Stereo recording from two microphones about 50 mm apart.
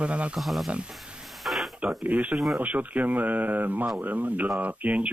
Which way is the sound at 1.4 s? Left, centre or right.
Centre.